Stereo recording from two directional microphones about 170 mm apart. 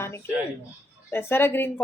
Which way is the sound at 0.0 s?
15° left (ahead or behind).